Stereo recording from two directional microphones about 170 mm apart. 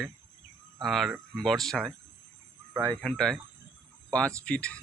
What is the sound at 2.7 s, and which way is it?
Speech, 15° right (ahead or behind).